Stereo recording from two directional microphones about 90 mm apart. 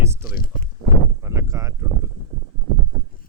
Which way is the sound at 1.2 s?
35° right (ahead or behind).